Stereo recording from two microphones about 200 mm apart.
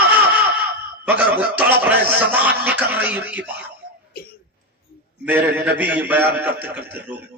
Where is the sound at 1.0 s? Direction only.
10° right (ahead or behind).